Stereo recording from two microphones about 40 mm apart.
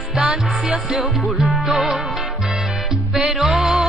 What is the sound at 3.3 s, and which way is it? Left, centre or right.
Music, centre.